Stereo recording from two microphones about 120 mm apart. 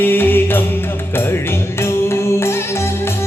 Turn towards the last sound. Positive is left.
turn(degrees=20)  # may be behind; listen again after turning